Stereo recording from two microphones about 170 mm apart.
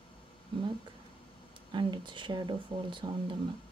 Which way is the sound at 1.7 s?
30° right (ahead or behind).